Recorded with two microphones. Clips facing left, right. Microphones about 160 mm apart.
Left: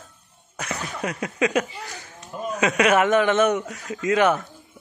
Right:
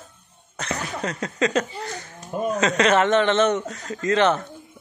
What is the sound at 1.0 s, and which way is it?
Speech, 10° left (ahead or behind).